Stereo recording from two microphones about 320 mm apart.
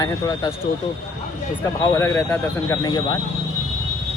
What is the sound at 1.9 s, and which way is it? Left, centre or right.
Speech, centre.